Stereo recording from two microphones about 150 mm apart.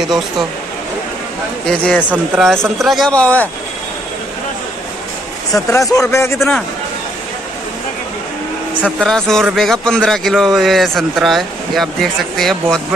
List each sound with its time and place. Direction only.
1.7 s speech: 5° left (ahead or behind)
2.0 s speech: 10° right (ahead or behind)
2.5 s a man's voice: centre (ahead or behind)
5.5 s speech: 20° left (ahead or behind)
9.0 s a man's voice: 5° left (ahead or behind)